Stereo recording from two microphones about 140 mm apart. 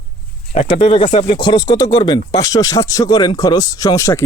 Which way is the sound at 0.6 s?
40° left (ahead or behind).